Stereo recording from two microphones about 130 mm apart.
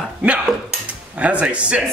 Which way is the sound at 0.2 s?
10° right (ahead or behind).